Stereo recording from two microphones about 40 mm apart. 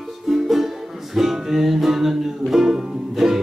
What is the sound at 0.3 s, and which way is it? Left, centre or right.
Music, centre.